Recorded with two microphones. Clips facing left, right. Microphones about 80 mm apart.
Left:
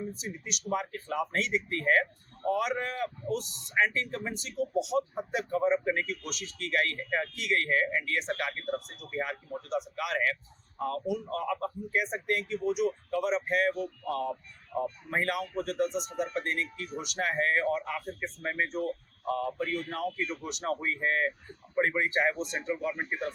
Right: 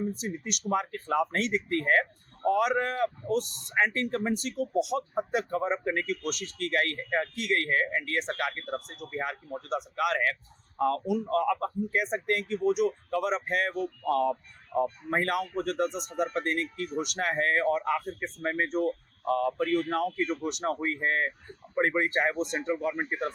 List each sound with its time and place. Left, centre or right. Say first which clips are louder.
0.0 s speech: right 5 dB; right
19.3 s speech: right 5 dB; right